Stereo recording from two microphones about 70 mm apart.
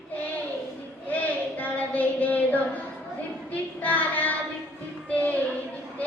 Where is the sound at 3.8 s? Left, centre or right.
Left.